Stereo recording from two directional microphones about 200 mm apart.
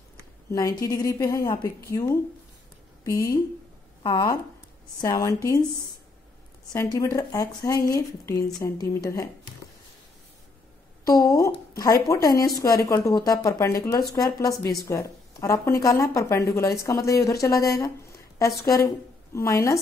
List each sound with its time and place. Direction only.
0.5 s a woman's voice: 15° left (ahead or behind)
6.7 s a woman's voice: 15° left (ahead or behind)
11.1 s a woman's voice: 15° left (ahead or behind)